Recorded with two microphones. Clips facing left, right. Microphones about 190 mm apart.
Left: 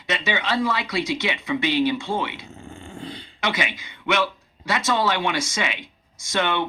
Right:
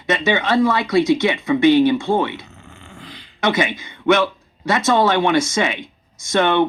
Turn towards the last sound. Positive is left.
turn(degrees=-50)  # may be behind; listen again after turning